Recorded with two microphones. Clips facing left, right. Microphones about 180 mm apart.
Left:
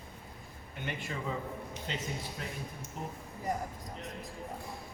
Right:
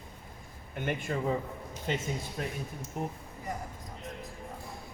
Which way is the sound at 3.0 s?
50° right (ahead or behind).